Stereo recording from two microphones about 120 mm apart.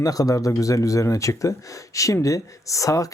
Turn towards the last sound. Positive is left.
turn(degrees=30)  # may be behind; listen again after turning